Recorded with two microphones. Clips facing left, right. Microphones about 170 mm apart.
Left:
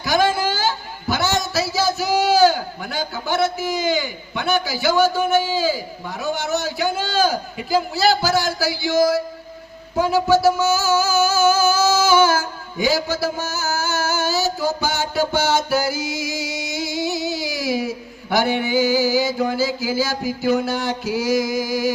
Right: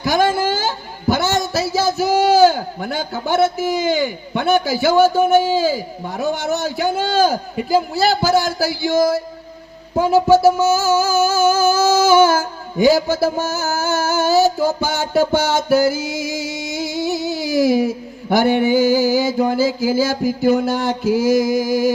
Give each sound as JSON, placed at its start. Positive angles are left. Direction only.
{"t": 0.0, "sound": "a man's voice", "side_deg": -50}
{"t": 10.3, "sound": "music", "side_deg": -50}